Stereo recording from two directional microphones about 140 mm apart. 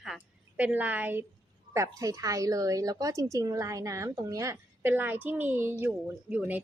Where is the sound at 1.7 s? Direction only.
25° right (ahead or behind).